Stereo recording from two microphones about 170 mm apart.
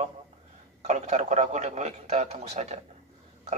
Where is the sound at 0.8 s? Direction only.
40° right (ahead or behind).